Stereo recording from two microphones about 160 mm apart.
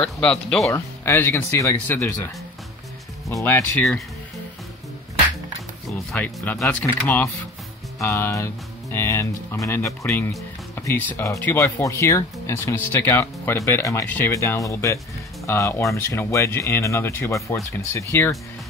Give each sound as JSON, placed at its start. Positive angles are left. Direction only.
{"t": 0.0, "sound": "speech", "side_deg": 5}
{"t": 0.7, "sound": "speech", "side_deg": 20}
{"t": 3.3, "sound": "speech", "side_deg": 20}
{"t": 5.9, "sound": "speech", "side_deg": 10}